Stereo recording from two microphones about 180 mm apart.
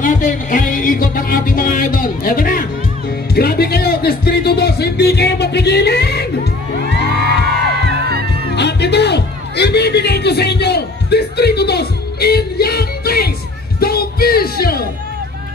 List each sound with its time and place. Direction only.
0.0 s music: 45° left (ahead or behind); by 6.2 s 65° left (ahead or behind)
8.5 s music: 70° left (ahead or behind)